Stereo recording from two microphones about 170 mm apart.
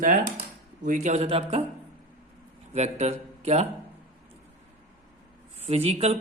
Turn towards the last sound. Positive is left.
turn(degrees=-35)  # may be behind; listen again after turning